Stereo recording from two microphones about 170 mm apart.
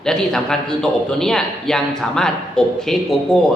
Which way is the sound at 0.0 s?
5° left (ahead or behind).